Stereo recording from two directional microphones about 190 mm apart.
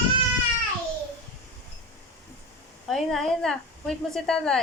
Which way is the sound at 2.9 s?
Centre (ahead or behind).